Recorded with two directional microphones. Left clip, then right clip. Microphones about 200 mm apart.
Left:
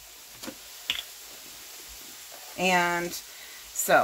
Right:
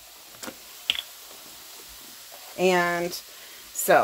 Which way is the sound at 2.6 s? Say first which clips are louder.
Right 2 dB; 30° right (ahead or behind).